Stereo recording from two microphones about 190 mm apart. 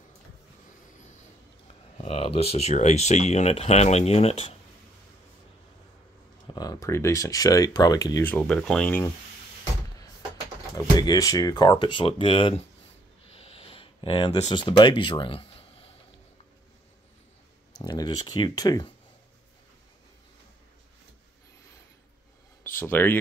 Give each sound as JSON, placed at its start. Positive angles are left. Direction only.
{"t": 2.0, "sound": "speech", "side_deg": 30}
{"t": 6.4, "sound": "speech", "side_deg": 20}
{"t": 11.0, "sound": "speech", "side_deg": 20}
{"t": 13.4, "sound": "a sound", "side_deg": 30}
{"t": 17.8, "sound": "speech", "side_deg": 20}
{"t": 22.8, "sound": "speech", "side_deg": 10}